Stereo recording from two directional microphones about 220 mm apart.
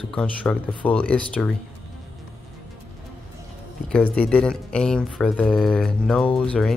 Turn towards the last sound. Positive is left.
turn(degrees=5)  # may be behind; listen again after turning